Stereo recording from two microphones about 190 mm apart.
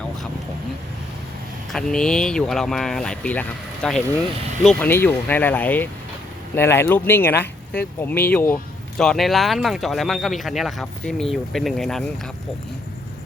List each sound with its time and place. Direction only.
1.7 s speech: 5° left (ahead or behind)